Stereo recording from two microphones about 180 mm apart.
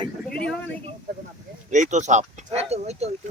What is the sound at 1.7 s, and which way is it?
Speech, 40° right (ahead or behind).